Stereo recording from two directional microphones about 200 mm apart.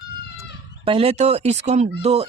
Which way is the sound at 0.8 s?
30° right (ahead or behind).